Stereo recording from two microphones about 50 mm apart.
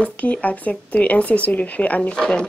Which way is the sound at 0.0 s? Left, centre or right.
Left.